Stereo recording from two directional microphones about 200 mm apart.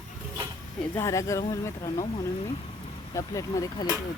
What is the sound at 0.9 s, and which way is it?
Speech, 15° left (ahead or behind).